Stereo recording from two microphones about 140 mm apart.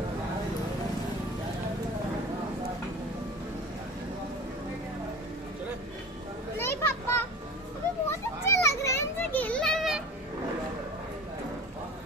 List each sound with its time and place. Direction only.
6.6 s children playing: 20° left (ahead or behind); by 10.0 s centre (ahead or behind)